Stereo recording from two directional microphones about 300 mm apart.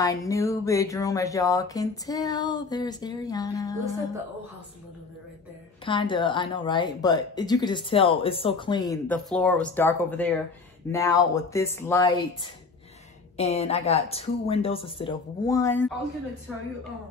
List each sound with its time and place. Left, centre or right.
0.0 s speech: centre
5.9 s speech: centre
13.4 s speech: left